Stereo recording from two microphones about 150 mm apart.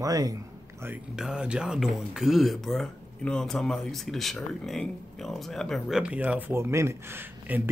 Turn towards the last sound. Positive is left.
turn(degrees=-15)  # may be behind; listen again after turning